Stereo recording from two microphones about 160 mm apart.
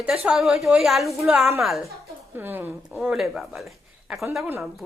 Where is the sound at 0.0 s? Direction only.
5° right (ahead or behind).